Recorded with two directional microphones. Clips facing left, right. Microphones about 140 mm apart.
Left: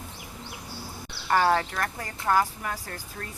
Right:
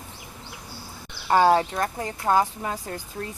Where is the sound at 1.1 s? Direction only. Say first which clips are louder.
Right 4 dB; 20° right (ahead or behind).